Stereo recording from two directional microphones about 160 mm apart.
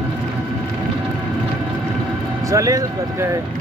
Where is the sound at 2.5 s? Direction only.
20° right (ahead or behind).